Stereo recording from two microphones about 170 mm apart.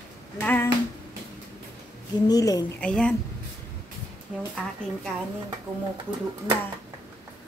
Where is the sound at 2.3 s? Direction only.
20° left (ahead or behind).